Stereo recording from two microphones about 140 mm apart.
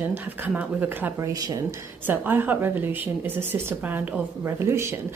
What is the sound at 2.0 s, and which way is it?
Speech, 15° right (ahead or behind).